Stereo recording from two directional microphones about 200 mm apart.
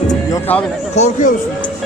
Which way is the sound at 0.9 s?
40° left (ahead or behind).